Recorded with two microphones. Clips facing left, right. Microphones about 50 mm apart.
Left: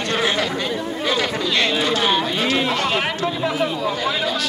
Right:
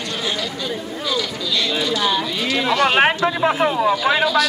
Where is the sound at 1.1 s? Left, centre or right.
Left.